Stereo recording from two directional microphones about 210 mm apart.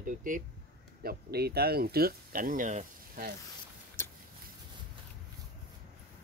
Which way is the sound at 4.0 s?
10° left (ahead or behind).